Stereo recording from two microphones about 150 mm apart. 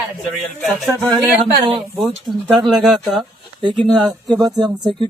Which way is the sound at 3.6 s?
30° right (ahead or behind).